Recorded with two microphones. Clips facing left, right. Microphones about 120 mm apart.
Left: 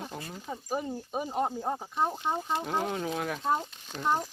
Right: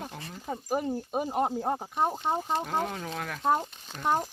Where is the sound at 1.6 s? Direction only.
20° right (ahead or behind).